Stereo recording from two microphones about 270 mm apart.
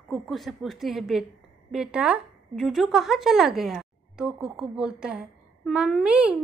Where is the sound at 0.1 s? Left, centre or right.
Centre.